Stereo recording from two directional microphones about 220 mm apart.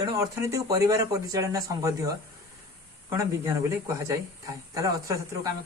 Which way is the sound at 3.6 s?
10° right (ahead or behind).